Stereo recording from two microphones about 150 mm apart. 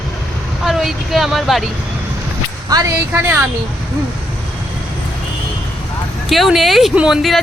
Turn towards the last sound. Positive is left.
turn(degrees=0)  # may be behind; listen again after turning